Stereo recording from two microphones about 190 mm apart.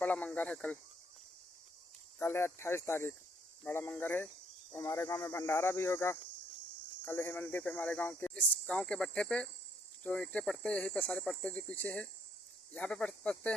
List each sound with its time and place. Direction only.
0.0 s cricket: 5° left (ahead or behind)
2.1 s speech: 15° left (ahead or behind)